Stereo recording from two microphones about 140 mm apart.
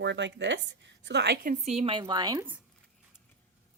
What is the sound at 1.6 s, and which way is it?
Speech, 45° right (ahead or behind).